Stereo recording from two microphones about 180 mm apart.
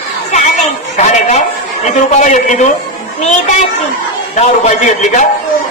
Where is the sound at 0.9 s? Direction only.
40° left (ahead or behind).